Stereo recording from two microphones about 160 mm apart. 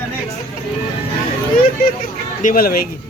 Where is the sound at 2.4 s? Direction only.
65° left (ahead or behind).